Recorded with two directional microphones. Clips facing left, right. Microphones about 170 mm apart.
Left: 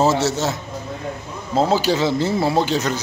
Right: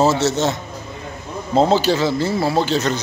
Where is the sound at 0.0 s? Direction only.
15° left (ahead or behind).